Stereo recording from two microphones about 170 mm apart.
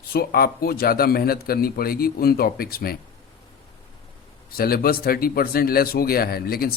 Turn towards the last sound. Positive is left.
turn(degrees=60)  # may be behind; listen again after turning